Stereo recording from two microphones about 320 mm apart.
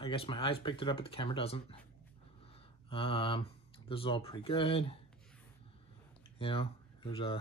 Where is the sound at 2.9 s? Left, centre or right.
Centre.